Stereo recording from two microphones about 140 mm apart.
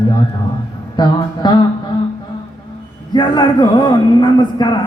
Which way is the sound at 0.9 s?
30° left (ahead or behind).